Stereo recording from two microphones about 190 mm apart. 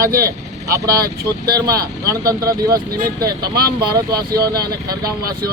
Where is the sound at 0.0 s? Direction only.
50° right (ahead or behind).